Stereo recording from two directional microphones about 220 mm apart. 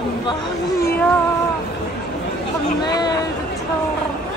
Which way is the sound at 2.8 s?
20° left (ahead or behind).